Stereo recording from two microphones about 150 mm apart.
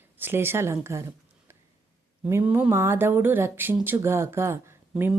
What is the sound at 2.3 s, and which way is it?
Speech, 15° right (ahead or behind).